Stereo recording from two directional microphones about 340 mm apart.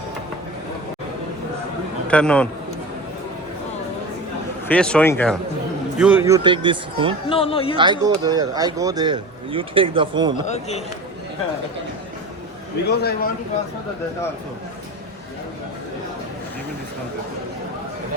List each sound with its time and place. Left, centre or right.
2.0 s speech: centre
4.7 s speech: centre
7.3 s speech: centre
7.8 s speech: centre
10.4 s a man's voice: centre
12.9 s a man's voice: left